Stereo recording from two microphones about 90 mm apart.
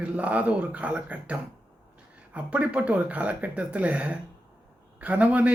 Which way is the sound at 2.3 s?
15° right (ahead or behind).